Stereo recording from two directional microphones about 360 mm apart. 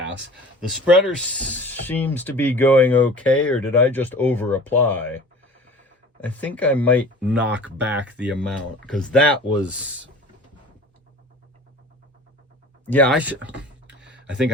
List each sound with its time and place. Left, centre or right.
0.7 s speech: centre
12.9 s speech: centre